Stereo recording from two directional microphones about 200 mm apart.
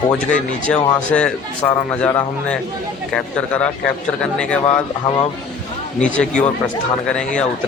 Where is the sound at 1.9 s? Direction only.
5° left (ahead or behind).